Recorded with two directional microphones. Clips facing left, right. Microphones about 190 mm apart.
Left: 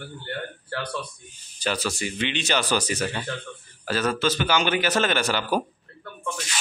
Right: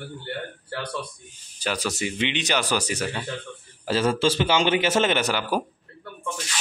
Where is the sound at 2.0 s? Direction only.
20° right (ahead or behind).